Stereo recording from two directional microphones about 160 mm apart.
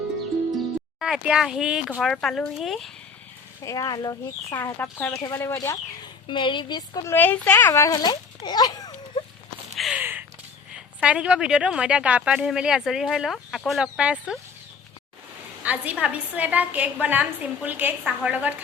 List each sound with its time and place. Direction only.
0.5 s speech: centre (ahead or behind)
3.6 s speech: 20° left (ahead or behind)
6.2 s speech: 30° left (ahead or behind)
9.7 s a sound: centre (ahead or behind)
10.0 s a sound: 10° right (ahead or behind)
10.7 s a woman's voice: 5° right (ahead or behind)
15.6 s a woman's voice: 10° right (ahead or behind)